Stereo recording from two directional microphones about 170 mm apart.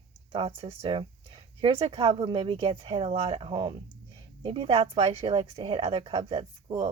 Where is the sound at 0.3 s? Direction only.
30° right (ahead or behind).